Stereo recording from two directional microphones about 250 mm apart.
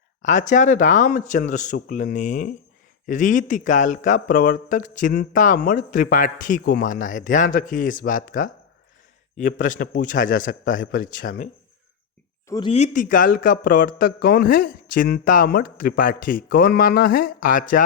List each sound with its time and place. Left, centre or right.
0.2 s speech: left
9.6 s speech: left
12.5 s speech: centre; by 17.8 s left